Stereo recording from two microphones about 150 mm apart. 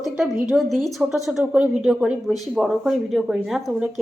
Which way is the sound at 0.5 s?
5° left (ahead or behind).